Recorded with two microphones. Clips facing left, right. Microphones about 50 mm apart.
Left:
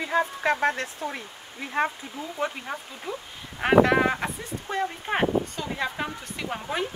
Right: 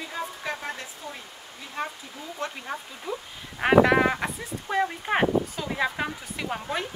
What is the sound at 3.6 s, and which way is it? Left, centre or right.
Speech, centre.